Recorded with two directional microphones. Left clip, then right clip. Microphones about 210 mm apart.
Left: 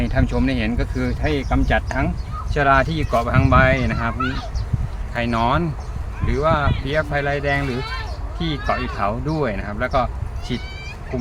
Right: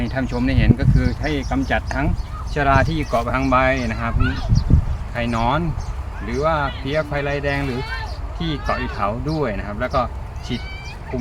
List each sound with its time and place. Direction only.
0.0 s speech: 25° left (ahead or behind)
4.2 s speech: 60° left (ahead or behind)
5.1 s speech: 25° left (ahead or behind)
7.7 s speech: 60° left (ahead or behind)
8.4 s speech: 15° left (ahead or behind)